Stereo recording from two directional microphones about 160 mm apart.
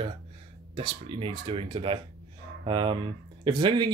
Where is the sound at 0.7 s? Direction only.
35° right (ahead or behind).